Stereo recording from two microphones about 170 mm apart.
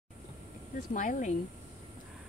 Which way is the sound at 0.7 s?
50° left (ahead or behind).